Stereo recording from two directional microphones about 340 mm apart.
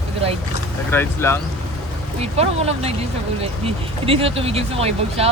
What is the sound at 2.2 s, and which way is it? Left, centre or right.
Speech, centre.